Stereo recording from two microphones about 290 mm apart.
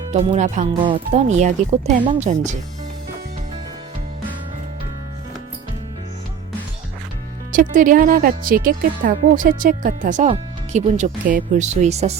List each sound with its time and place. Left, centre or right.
0.1 s speech: right
7.5 s speech: right